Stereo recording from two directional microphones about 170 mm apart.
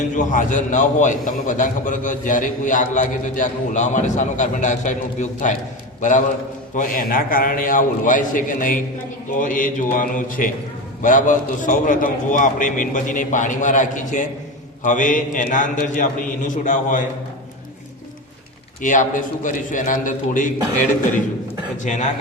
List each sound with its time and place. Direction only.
0.0 s a man's voice: 50° left (ahead or behind)
18.8 s a man's voice: 50° left (ahead or behind)
21.8 s a man's voice: 45° left (ahead or behind)